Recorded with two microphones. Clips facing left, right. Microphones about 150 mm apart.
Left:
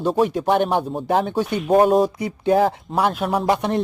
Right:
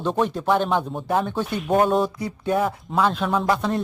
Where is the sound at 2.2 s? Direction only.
20° left (ahead or behind).